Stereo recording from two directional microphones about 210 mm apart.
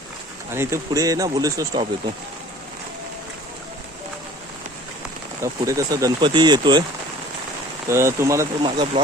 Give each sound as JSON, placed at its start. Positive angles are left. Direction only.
{"t": 0.5, "sound": "speech", "side_deg": -10}
{"t": 5.4, "sound": "speech", "side_deg": -15}
{"t": 7.9, "sound": "speech", "side_deg": -10}